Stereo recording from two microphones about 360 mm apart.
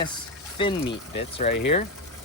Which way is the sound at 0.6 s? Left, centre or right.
Centre.